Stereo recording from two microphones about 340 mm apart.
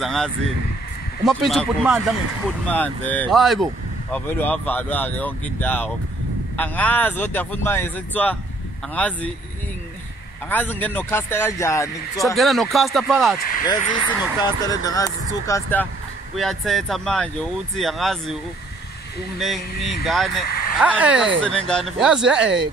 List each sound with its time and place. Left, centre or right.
0.0 s speech: centre
10.5 s speech: centre
13.7 s speech: left
14.4 s speech: centre
19.4 s speech: centre
20.4 s vehicle: left
20.8 s speech: centre